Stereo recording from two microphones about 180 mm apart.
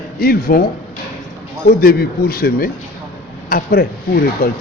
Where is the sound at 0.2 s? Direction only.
55° left (ahead or behind).